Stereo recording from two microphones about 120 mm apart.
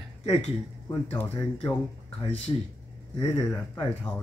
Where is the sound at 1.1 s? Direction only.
15° left (ahead or behind).